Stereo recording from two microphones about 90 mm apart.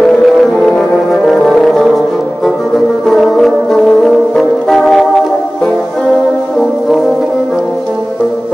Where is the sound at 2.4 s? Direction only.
Centre (ahead or behind).